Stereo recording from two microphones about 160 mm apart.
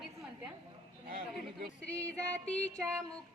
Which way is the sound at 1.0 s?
65° right (ahead or behind).